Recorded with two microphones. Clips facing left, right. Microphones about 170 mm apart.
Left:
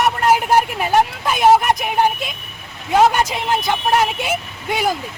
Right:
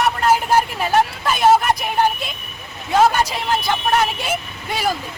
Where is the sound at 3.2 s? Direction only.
20° left (ahead or behind).